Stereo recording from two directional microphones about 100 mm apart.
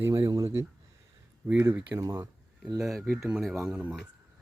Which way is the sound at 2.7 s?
5° right (ahead or behind).